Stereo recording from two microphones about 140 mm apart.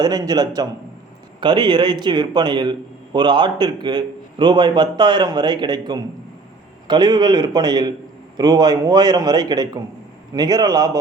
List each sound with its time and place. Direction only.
0.0 s a man's voice: 30° right (ahead or behind)